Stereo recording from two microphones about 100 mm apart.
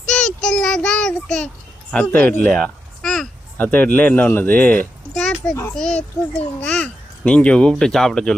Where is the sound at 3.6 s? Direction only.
20° left (ahead or behind).